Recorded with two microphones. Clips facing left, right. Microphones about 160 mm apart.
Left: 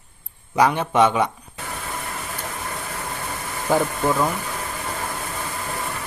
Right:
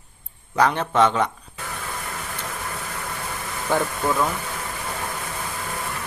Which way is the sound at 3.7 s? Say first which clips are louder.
Left 3 dB; 10° left (ahead or behind).